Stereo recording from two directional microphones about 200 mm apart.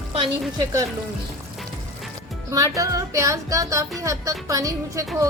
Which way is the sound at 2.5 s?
15° right (ahead or behind).